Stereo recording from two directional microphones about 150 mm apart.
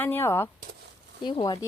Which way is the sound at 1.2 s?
30° left (ahead or behind).